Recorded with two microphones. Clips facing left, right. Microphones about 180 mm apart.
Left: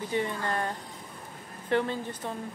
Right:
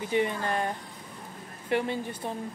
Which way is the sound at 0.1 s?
15° right (ahead or behind).